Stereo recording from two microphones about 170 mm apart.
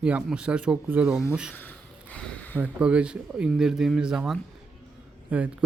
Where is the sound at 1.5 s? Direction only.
10° left (ahead or behind).